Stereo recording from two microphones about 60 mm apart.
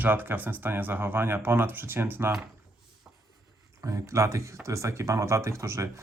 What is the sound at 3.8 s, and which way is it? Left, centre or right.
Speech, right.